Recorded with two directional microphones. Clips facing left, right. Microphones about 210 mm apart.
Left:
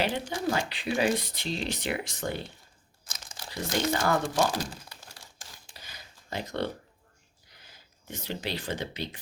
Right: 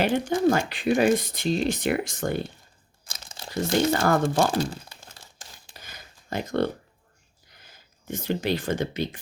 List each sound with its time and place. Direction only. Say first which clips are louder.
0.0 s speech: right 8 dB; 50° right (ahead or behind)
3.1 s crumpling: right 3 dB; 25° right (ahead or behind)
3.9 s speech: right 5 dB; 55° right (ahead or behind)
4.5 s crumpling: right 7 dB; 25° right (ahead or behind)
5.7 s a sound: right 3 dB; 50° right (ahead or behind)
7.7 s speech: right 8 dB; 50° right (ahead or behind)